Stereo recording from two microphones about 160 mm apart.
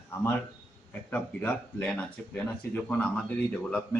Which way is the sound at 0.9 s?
10° left (ahead or behind).